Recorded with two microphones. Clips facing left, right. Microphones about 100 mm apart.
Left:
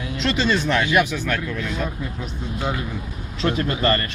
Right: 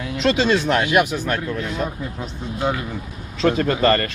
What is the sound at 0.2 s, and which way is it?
Speech, 50° right (ahead or behind).